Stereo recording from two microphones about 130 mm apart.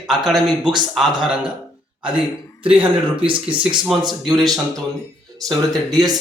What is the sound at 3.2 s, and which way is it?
Speech, 40° right (ahead or behind).